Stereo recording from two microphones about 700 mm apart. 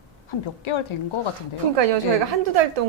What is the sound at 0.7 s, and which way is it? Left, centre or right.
Speech, left.